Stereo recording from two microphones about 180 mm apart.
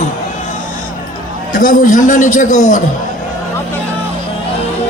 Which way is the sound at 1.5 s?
50° left (ahead or behind).